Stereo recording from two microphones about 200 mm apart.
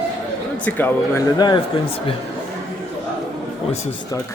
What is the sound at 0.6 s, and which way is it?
Speech, 10° left (ahead or behind).